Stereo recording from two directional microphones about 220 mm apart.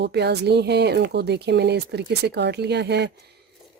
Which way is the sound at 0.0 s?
50° right (ahead or behind).